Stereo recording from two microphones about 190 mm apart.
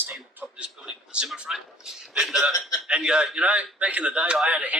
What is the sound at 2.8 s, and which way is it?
A man's voice, 5° right (ahead or behind).